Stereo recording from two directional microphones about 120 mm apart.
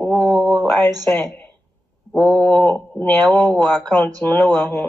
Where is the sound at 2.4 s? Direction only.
10° left (ahead or behind).